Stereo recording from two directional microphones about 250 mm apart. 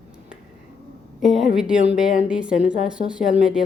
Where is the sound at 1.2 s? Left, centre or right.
Centre.